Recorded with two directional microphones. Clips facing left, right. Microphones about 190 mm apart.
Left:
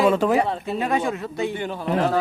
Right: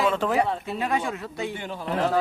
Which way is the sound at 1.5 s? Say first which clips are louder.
Left 5 dB; 55° left (ahead or behind).